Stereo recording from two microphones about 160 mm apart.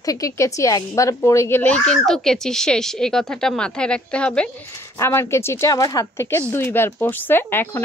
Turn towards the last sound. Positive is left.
turn(degrees=10)  # may be behind; listen again after turning